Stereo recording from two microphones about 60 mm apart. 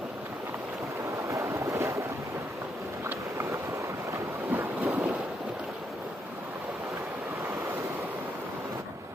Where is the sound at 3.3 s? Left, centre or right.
Right.